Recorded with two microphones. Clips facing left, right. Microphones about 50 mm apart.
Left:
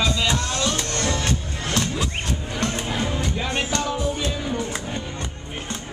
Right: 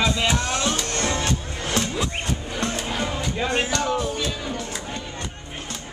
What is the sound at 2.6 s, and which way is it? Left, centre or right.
Music, centre.